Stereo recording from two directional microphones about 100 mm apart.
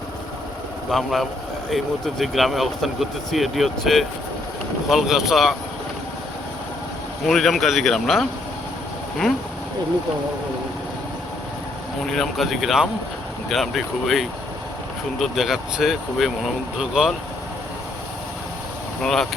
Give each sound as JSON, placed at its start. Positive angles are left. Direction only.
{"t": 0.9, "sound": "speech", "side_deg": 0}
{"t": 7.3, "sound": "speech", "side_deg": 0}
{"t": 12.0, "sound": "speech", "side_deg": 5}
{"t": 19.0, "sound": "speech", "side_deg": 5}